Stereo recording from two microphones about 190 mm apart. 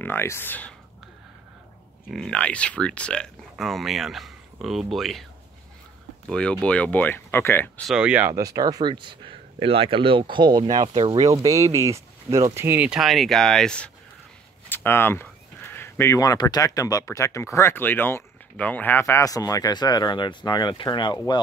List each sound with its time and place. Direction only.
0.0 s speech: 10° left (ahead or behind)
2.0 s speech: 5° left (ahead or behind)
6.2 s speech: 5° left (ahead or behind)
7.9 s speech: 5° right (ahead or behind); by 21.4 s 25° left (ahead or behind)